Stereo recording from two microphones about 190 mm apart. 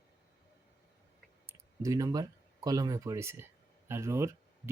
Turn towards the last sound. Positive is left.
turn(degrees=-15)  # may be behind; listen again after turning